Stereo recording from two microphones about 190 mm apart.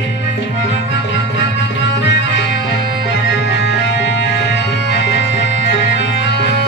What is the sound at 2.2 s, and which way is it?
Music, 65° left (ahead or behind).